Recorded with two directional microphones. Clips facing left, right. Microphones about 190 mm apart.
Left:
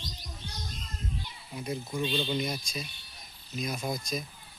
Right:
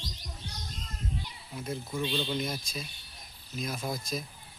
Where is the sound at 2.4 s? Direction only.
Centre (ahead or behind).